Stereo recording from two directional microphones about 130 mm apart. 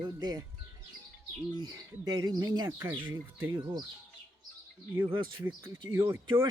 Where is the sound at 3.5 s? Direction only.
30° right (ahead or behind).